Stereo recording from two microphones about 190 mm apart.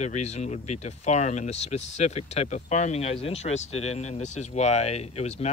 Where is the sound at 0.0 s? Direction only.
35° left (ahead or behind).